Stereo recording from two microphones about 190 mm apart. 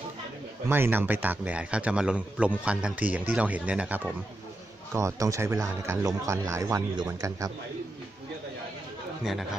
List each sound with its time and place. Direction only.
0.7 s speech: 10° right (ahead or behind)
9.2 s speech: centre (ahead or behind)